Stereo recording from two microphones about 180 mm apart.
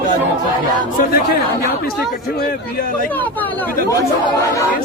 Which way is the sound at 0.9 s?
55° left (ahead or behind).